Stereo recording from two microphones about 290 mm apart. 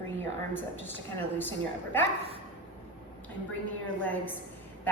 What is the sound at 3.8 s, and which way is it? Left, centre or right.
Speech, centre.